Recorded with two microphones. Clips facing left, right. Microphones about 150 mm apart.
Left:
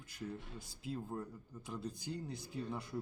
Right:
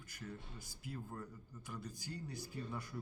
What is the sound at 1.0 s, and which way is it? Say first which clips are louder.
A woman's voice: left 5 dB; 20° left (ahead or behind).